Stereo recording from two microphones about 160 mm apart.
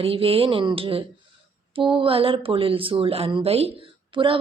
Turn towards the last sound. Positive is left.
turn(degrees=-35)  # may be behind; listen again after turning